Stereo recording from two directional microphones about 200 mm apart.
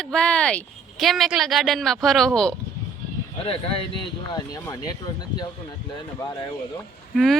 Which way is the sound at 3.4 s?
30° left (ahead or behind).